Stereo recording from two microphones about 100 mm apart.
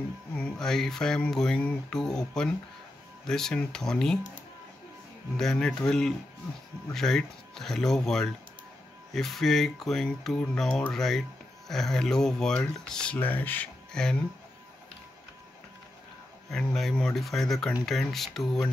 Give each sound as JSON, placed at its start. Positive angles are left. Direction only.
{"t": 0.4, "sound": "speech", "side_deg": 5}
{"t": 5.4, "sound": "speech", "side_deg": 5}
{"t": 13.9, "sound": "speech", "side_deg": 5}
{"t": 16.4, "sound": "speech", "side_deg": 5}